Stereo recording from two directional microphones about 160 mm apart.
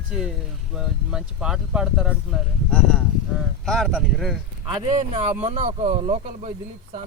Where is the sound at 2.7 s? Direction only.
5° left (ahead or behind).